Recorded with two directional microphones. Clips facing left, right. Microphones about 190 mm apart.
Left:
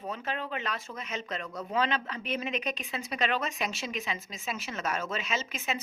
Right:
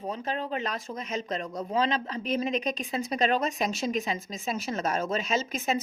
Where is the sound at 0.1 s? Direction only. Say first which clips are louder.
Right 3 dB; 35° right (ahead or behind).